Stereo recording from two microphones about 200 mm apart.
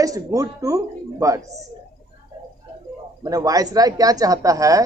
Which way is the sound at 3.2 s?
15° right (ahead or behind).